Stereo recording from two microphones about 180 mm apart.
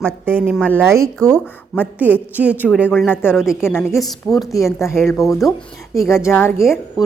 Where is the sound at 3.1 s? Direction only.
10° left (ahead or behind).